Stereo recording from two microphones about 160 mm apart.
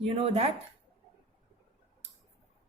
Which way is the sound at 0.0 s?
35° right (ahead or behind).